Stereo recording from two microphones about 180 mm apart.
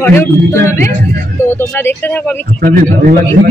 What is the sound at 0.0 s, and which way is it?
Speech, 15° left (ahead or behind).